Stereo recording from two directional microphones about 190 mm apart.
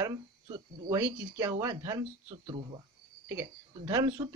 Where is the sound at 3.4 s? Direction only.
20° right (ahead or behind).